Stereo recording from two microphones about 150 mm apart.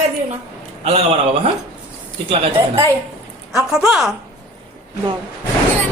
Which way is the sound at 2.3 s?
40° right (ahead or behind).